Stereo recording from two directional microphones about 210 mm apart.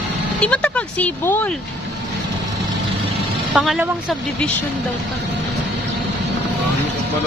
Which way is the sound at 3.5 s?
5° right (ahead or behind).